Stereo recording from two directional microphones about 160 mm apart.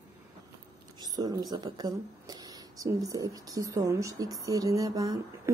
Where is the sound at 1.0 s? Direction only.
25° right (ahead or behind).